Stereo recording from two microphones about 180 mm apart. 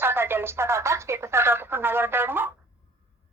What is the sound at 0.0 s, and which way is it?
A woman's voice, 10° right (ahead or behind).